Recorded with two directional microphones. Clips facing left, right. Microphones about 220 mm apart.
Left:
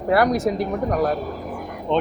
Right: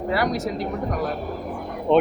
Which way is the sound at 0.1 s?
55° left (ahead or behind).